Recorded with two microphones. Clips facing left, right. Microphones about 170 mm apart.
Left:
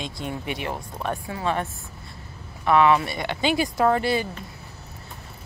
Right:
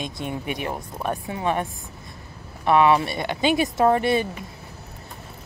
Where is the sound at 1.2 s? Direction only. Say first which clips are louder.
Right 2 dB; 20° right (ahead or behind).